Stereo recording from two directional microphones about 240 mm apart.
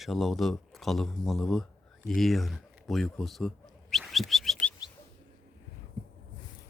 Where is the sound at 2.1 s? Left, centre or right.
Centre.